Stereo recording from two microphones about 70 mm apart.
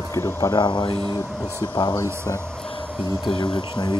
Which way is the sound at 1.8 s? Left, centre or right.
Left.